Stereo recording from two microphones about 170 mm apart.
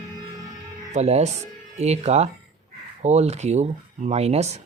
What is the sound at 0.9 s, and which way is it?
Speech, 40° right (ahead or behind).